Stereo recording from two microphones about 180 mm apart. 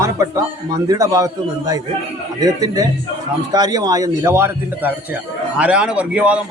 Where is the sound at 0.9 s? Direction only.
20° right (ahead or behind).